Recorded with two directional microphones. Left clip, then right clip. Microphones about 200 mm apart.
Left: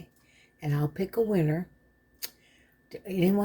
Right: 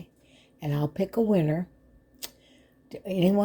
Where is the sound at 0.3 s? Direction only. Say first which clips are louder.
Right 2 dB; 20° right (ahead or behind).